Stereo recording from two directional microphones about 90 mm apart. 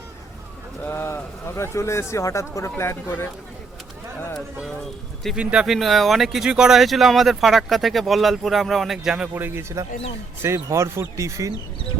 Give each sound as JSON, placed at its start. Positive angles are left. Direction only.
{"t": 0.9, "sound": "speech", "side_deg": 25}
{"t": 5.4, "sound": "speech", "side_deg": -15}
{"t": 5.6, "sound": "speech", "side_deg": 0}
{"t": 9.3, "sound": "a man's voice", "side_deg": -25}